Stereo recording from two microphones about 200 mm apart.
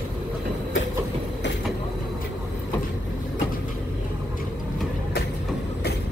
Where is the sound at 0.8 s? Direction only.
70° left (ahead or behind).